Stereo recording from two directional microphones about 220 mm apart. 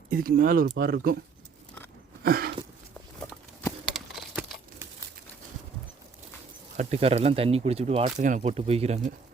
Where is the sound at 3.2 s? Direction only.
10° left (ahead or behind).